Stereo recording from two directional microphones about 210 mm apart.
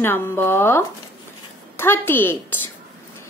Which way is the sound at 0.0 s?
10° left (ahead or behind).